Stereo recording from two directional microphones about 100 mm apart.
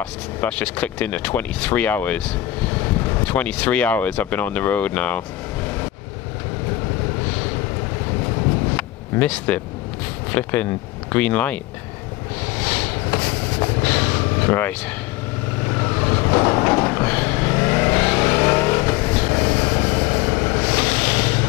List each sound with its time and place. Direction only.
0.4 s speech: 15° left (ahead or behind)
8.7 s a sound: 15° left (ahead or behind)
10.3 s speech: 15° left (ahead or behind)
12.6 s vehicle: 15° left (ahead or behind)